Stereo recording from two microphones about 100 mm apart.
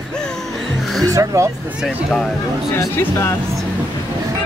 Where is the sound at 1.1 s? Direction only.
35° right (ahead or behind).